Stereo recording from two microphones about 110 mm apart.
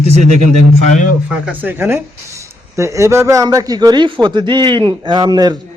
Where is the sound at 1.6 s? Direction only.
20° right (ahead or behind); by 5.6 s 35° right (ahead or behind).